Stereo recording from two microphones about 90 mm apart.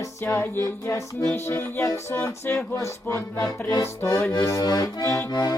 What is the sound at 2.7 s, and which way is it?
Accordion, 45° left (ahead or behind).